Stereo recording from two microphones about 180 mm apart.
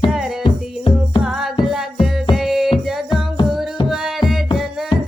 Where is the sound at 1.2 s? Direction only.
Centre (ahead or behind).